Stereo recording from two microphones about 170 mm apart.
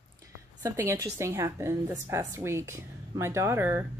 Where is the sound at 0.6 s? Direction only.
15° right (ahead or behind).